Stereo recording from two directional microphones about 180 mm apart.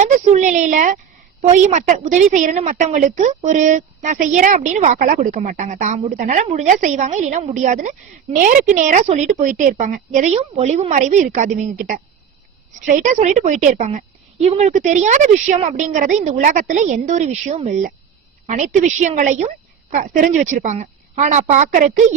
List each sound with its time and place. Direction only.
0.0 s a woman's voice: 40° right (ahead or behind)